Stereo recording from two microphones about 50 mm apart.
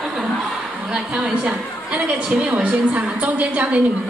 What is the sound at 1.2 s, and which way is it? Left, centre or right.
A woman's voice, right.